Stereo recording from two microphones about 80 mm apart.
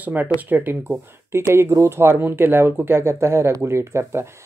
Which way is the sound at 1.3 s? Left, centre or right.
Right.